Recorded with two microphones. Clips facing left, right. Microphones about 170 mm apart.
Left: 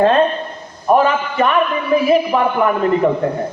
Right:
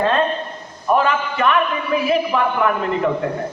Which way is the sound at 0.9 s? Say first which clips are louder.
Left 4 dB; 40° left (ahead or behind).